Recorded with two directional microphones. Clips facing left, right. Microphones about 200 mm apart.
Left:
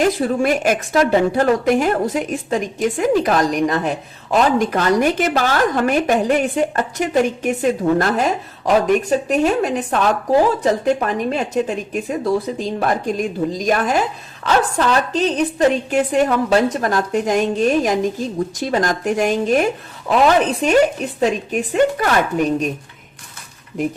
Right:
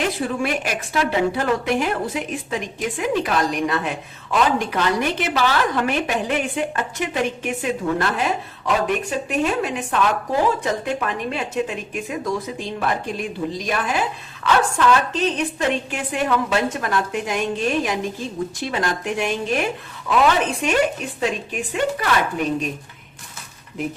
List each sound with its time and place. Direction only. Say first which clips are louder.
0.0 s a woman's voice: left 6 dB; 45° left (ahead or behind)